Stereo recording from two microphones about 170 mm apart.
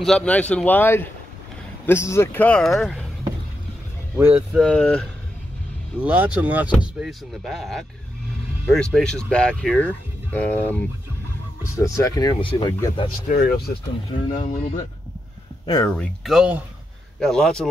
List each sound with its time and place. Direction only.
0.0 s speech: 5° left (ahead or behind)
4.2 s speech: 10° right (ahead or behind)
4.6 s speech: 5° left (ahead or behind)
5.9 s speech: 10° right (ahead or behind); by 13.1 s 25° left (ahead or behind)
14.3 s speech: 45° left (ahead or behind)
15.6 s speech: 25° left (ahead or behind)
15.9 s speech: 5° left (ahead or behind)